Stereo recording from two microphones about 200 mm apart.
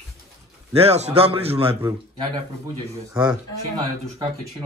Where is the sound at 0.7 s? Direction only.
30° right (ahead or behind).